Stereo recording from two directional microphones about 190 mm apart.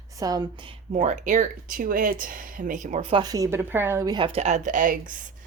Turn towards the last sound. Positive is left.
turn(degrees=-45)  # may be behind; listen again after turning